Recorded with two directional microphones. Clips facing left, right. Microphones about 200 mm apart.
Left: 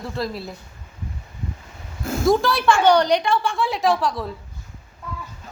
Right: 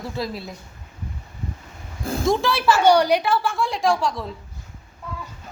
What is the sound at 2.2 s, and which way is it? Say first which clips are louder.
A woman's voice: left 2 dB; centre (ahead or behind).